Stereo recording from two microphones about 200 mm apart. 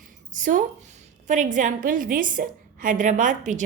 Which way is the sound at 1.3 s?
40° right (ahead or behind).